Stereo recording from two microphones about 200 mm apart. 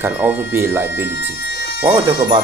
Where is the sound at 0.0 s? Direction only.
10° right (ahead or behind).